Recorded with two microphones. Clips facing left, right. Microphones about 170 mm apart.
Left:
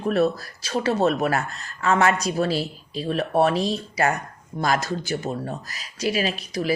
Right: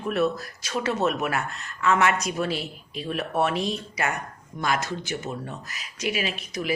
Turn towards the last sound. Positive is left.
turn(degrees=35)  # may be behind; listen again after turning